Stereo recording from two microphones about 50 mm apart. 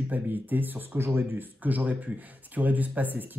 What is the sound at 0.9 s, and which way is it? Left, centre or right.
Speech, right.